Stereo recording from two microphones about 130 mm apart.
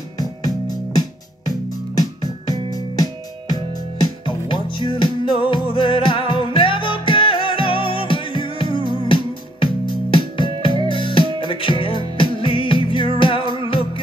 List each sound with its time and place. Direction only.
0.2 s music: 30° left (ahead or behind)